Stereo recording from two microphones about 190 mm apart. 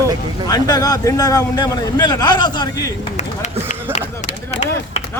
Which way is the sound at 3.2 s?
40° left (ahead or behind).